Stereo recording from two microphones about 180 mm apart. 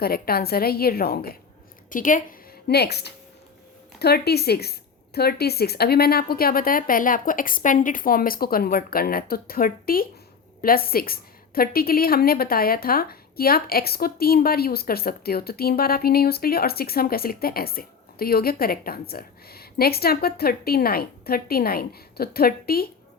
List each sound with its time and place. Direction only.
0.0 s a woman's voice: 55° left (ahead or behind)
2.6 s a woman's voice: 65° left (ahead or behind)